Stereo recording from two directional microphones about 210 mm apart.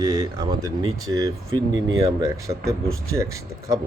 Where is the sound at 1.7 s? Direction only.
65° right (ahead or behind).